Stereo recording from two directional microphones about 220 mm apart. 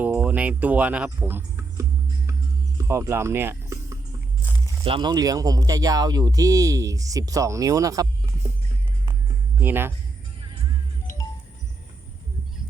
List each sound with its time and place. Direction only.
0.0 s music: 5° right (ahead or behind)
2.7 s speech: 15° right (ahead or behind)
9.6 s speech: 10° right (ahead or behind)